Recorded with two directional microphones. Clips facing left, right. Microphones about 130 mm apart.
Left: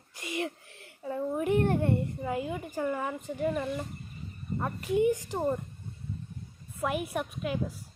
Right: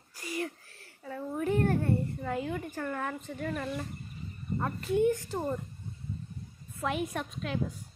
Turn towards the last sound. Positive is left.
turn(degrees=10)  # may be behind; listen again after turning